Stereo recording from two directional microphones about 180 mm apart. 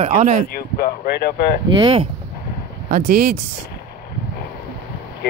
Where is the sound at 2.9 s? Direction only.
50° right (ahead or behind).